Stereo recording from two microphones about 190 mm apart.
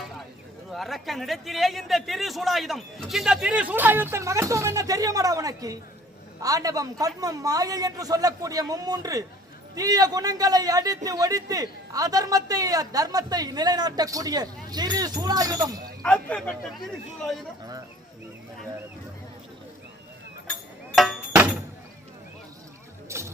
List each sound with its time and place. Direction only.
0.7 s a man's voice: centre (ahead or behind); by 15.8 s 20° right (ahead or behind)
16.0 s a man's voice: 5° left (ahead or behind)
20.9 s a sound: centre (ahead or behind)
23.0 s music: 15° right (ahead or behind)